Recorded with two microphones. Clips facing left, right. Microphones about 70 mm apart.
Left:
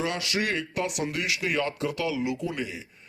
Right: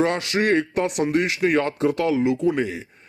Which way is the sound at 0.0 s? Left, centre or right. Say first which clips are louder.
Right 8 dB; right.